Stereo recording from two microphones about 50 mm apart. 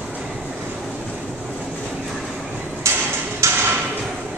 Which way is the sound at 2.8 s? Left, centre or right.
Right.